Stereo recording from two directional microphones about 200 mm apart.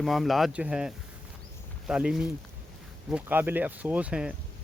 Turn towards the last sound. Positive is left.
turn(degrees=-5)  # may be behind; listen again after turning